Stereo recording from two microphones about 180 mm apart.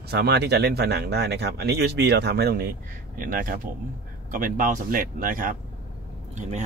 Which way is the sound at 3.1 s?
50° right (ahead or behind).